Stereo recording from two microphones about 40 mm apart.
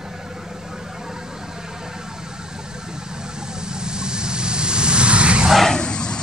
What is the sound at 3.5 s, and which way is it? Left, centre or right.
Vehicle, centre.